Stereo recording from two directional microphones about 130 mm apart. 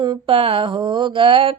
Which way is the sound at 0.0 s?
40° right (ahead or behind).